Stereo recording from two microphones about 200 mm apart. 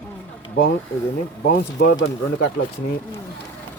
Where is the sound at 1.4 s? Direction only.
55° left (ahead or behind).